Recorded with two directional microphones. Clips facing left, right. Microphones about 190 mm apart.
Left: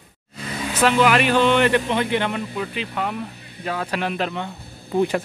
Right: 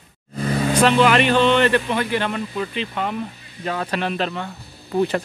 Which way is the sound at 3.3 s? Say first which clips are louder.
Left 1 dB; 60° left (ahead or behind).